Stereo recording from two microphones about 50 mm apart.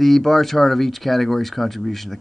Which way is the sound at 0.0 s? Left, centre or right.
Centre.